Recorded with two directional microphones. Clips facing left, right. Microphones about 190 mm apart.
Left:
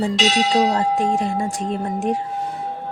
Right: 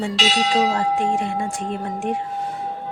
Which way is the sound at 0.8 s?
40° left (ahead or behind).